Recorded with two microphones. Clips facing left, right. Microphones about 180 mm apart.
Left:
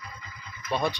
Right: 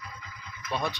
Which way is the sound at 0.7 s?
Centre (ahead or behind).